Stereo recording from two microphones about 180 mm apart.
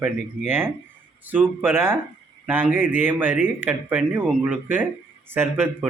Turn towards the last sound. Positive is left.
turn(degrees=-10)  # may be behind; listen again after turning